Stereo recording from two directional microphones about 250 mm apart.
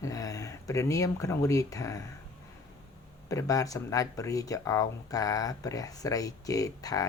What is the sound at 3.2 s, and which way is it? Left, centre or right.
Speech, centre.